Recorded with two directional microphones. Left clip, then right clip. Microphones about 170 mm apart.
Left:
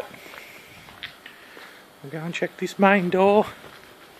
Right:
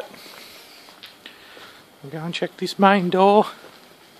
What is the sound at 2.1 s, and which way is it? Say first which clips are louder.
Speech: right 1 dB; 15° right (ahead or behind).